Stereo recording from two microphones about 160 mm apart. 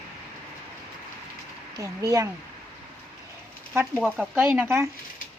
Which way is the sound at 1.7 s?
20° right (ahead or behind).